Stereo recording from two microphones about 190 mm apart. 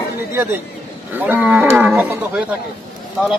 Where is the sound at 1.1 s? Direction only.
10° right (ahead or behind).